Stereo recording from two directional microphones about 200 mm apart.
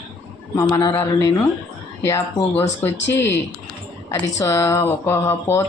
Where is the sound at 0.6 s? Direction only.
15° left (ahead or behind).